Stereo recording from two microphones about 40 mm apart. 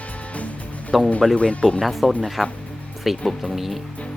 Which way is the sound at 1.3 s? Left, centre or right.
Left.